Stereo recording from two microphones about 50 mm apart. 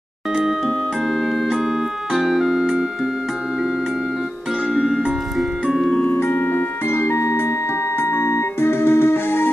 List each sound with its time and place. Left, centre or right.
0.7 s music: centre
2.1 s organ: centre
4.7 s music: centre
6.1 s music: left